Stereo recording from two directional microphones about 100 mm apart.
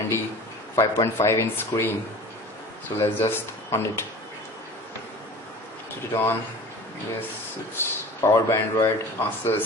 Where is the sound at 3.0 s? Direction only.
25° left (ahead or behind).